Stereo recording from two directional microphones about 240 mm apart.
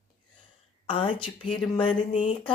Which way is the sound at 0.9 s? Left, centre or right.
Left.